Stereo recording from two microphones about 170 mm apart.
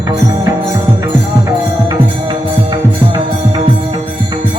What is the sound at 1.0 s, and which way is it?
Music, 20° right (ahead or behind).